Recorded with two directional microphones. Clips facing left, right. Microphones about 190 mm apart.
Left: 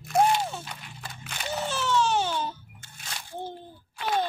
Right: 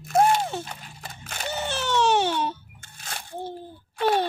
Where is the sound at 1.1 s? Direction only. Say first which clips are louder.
Right 2 dB; 45° right (ahead or behind).